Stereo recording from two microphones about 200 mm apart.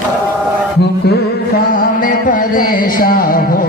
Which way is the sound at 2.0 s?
45° left (ahead or behind).